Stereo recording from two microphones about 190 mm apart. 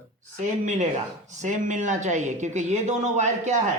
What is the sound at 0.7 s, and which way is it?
Speech, 40° right (ahead or behind).